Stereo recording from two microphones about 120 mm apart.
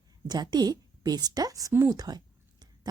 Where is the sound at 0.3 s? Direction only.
35° right (ahead or behind).